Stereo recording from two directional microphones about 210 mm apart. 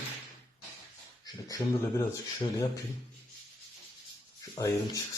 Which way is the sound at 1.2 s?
15° left (ahead or behind).